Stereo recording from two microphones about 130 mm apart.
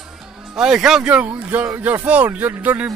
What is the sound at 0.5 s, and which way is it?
Speech, 5° right (ahead or behind).